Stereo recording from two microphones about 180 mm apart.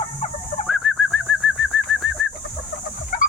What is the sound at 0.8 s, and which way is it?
Bird, 5° right (ahead or behind).